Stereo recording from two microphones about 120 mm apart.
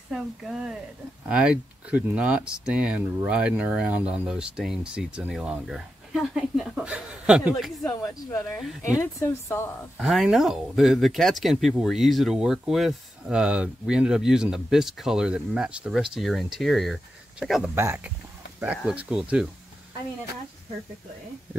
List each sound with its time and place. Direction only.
0.1 s speech: 5° right (ahead or behind)
7.5 s speech: 5° left (ahead or behind)
8.0 s speech: 25° left (ahead or behind)
9.9 s speech: centre (ahead or behind)
17.7 s speech: 20° right (ahead or behind)